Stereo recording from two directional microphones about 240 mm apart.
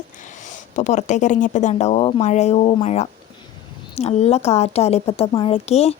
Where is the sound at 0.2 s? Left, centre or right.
Left.